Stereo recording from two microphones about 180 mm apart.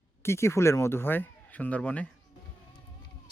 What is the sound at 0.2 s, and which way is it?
Speech, 15° left (ahead or behind).